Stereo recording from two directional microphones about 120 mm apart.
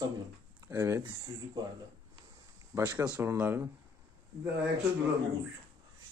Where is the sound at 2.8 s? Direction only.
15° right (ahead or behind).